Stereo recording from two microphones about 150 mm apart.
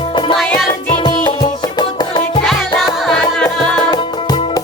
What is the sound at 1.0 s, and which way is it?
Music, 30° left (ahead or behind).